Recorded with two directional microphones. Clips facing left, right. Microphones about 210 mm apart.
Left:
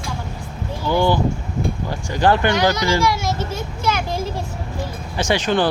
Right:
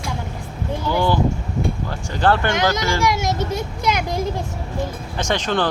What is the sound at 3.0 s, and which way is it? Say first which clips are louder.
A child's voice: even; 20° right (ahead or behind).